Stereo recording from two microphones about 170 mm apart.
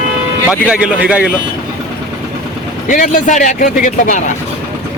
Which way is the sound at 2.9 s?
50° left (ahead or behind).